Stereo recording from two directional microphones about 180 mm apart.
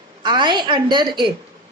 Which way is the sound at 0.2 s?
25° right (ahead or behind).